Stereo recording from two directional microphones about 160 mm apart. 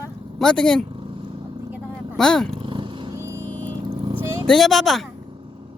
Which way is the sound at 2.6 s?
30° right (ahead or behind).